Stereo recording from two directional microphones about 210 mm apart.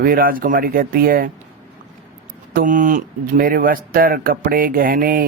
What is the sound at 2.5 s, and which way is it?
Speech, 40° right (ahead or behind).